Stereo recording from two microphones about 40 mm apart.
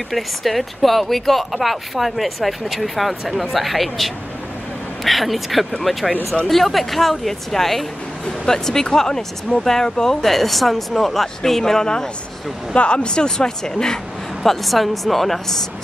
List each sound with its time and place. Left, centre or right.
0.1 s speech: centre
12.7 s speech: left
14.4 s speech: centre